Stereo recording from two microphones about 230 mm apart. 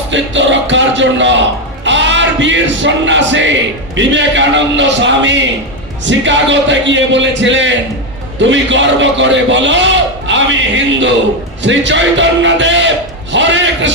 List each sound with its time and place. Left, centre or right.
0.1 s a man's voice: right
1.8 s music: right
3.9 s a man's voice: right